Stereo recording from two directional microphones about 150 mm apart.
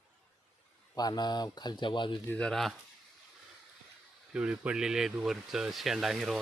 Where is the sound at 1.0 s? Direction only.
25° left (ahead or behind).